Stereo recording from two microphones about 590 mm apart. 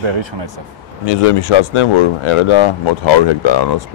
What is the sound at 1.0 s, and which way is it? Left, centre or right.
Speech, left.